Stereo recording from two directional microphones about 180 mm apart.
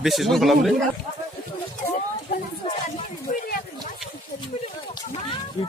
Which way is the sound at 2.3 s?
60° left (ahead or behind).